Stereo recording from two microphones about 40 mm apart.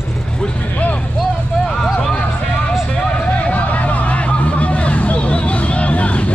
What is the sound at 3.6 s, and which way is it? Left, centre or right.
Vehicle, left.